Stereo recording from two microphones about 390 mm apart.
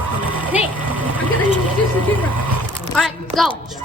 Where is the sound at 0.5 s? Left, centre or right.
Centre.